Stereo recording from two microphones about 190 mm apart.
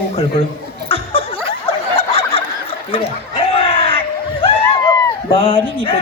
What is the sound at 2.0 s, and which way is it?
Snicker, 30° left (ahead or behind).